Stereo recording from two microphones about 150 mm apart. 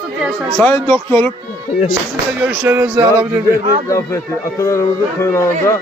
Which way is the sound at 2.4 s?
15° right (ahead or behind).